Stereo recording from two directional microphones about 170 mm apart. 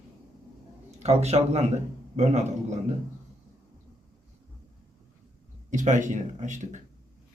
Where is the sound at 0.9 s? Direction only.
40° right (ahead or behind).